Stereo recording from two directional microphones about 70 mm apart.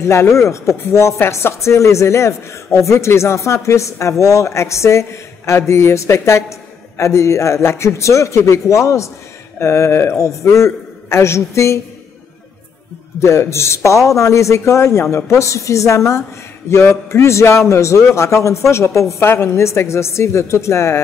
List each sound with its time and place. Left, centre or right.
0.0 s speech: left
13.2 s a woman's voice: left